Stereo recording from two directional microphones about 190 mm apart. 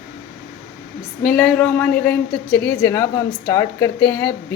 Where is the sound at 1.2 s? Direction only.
5° left (ahead or behind).